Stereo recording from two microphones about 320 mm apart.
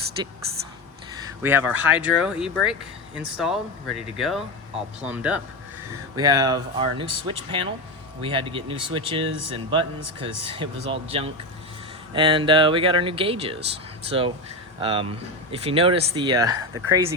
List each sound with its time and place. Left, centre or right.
1.4 s speech: centre